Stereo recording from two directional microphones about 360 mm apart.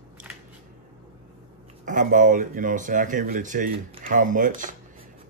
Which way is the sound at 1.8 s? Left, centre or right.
Right.